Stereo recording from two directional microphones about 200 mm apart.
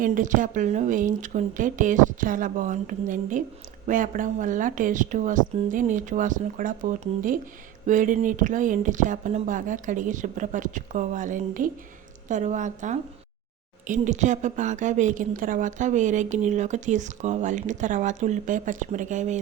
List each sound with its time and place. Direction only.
0.0 s a woman's voice: 40° right (ahead or behind)